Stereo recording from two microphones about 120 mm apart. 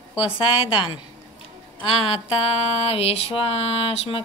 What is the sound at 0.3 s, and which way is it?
Speech, 50° left (ahead or behind).